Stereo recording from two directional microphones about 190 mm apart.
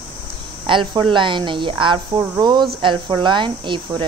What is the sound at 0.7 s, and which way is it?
Speech, 25° right (ahead or behind).